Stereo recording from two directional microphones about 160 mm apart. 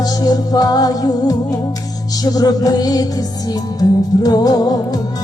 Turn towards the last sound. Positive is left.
turn(degrees=25)  # may be behind; listen again after turning